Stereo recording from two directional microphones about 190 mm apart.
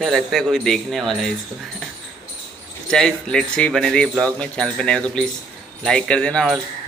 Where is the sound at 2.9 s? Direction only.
5° left (ahead or behind).